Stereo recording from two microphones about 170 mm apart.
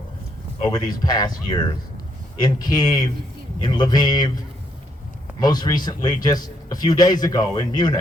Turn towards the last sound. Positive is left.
turn(degrees=25)  # may be behind; listen again after turning